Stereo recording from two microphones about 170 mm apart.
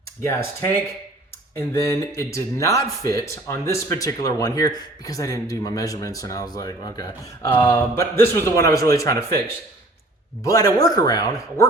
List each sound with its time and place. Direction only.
0.2 s speech: 15° left (ahead or behind)
10.4 s speech: 20° left (ahead or behind)